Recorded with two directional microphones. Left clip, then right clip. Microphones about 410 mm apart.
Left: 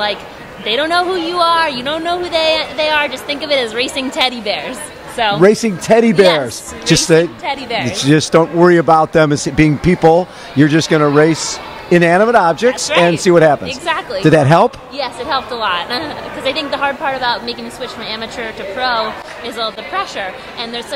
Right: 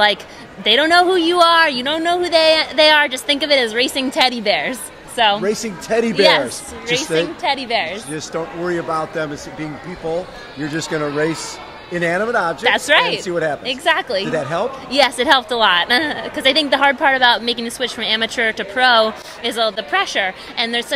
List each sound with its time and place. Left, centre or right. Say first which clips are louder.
0.7 s speech: right 2 dB; right
5.4 s speech: left 10 dB; left
7.4 s a woman's voice: even; centre
7.9 s a man's voice: left 13 dB; left
9.9 s speech: left 17 dB; left
10.6 s speech: left 10 dB; left
12.9 s speech: left 2 dB; right
13.2 s speech: left 11 dB; left
13.7 s speech: right 1 dB; right
14.3 s speech: left 14 dB; left
14.9 s speech: right 6 dB; right